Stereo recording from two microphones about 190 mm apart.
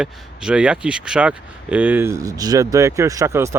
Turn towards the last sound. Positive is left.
turn(degrees=-15)  # may be behind; listen again after turning